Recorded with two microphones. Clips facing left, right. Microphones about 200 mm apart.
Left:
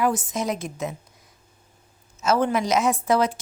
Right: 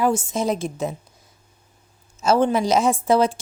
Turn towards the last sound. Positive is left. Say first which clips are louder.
# right 3 dB
turn(degrees=-30)  # may be behind; listen again after turning